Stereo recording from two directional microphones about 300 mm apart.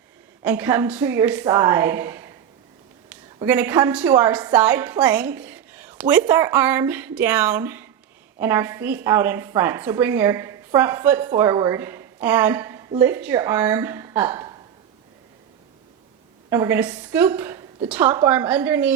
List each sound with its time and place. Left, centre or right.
0.4 s a woman's voice: centre
3.3 s a woman's voice: centre
16.5 s a woman's voice: centre